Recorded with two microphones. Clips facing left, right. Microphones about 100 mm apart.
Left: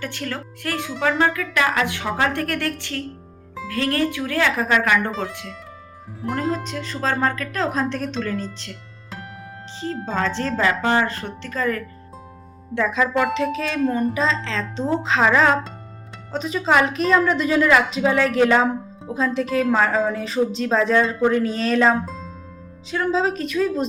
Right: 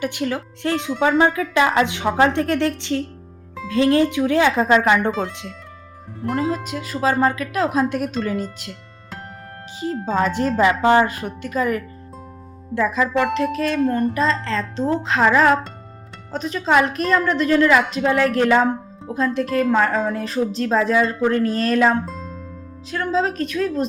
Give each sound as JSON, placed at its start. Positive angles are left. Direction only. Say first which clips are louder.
{"t": 0.0, "sound": "a woman's voice", "louder": "right 6 dB", "side_deg": -15}
{"t": 6.2, "sound": "speech", "louder": "right 2 dB", "side_deg": 0}
{"t": 12.7, "sound": "a woman's voice", "louder": "right 1 dB", "side_deg": -5}